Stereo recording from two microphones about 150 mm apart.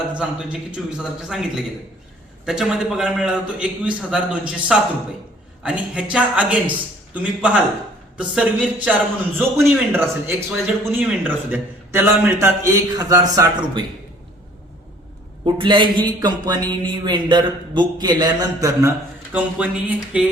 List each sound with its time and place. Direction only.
0.9 s a man's voice: 5° right (ahead or behind); by 13.8 s 25° right (ahead or behind)
15.4 s a man's voice: 30° right (ahead or behind); by 20.2 s 10° right (ahead or behind)